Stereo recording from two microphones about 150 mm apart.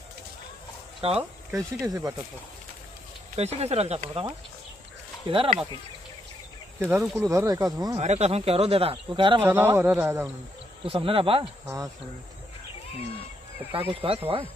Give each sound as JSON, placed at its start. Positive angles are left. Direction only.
{"t": 1.0, "sound": "speech", "side_deg": -40}
{"t": 1.5, "sound": "speech", "side_deg": -20}
{"t": 3.3, "sound": "speech", "side_deg": -45}
{"t": 4.1, "sound": "speech", "side_deg": -35}
{"t": 6.8, "sound": "speech", "side_deg": -15}
{"t": 8.0, "sound": "speech", "side_deg": -45}
{"t": 9.4, "sound": "speech", "side_deg": -15}
{"t": 10.8, "sound": "speech", "side_deg": -35}
{"t": 11.6, "sound": "speech", "side_deg": -20}
{"t": 13.7, "sound": "speech", "side_deg": -15}
{"t": 14.0, "sound": "speech", "side_deg": -40}